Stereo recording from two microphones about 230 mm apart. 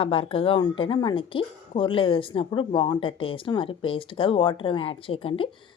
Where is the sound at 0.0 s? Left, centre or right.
Left.